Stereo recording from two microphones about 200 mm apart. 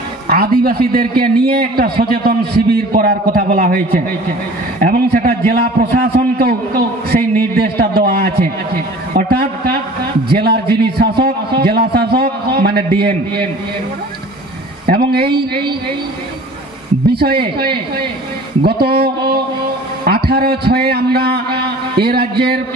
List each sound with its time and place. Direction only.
0.3 s a man's voice: 50° right (ahead or behind)
14.9 s a man's voice: 50° right (ahead or behind)
17.1 s a man's voice: 50° right (ahead or behind)